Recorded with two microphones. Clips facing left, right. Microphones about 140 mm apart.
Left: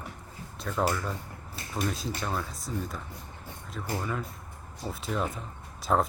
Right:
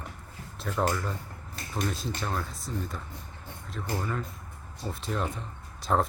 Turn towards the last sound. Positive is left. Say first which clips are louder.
# even
turn(degrees=0)  # may be behind; listen again after turning